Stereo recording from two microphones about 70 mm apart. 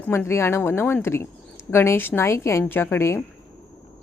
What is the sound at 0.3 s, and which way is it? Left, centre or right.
Speech, left.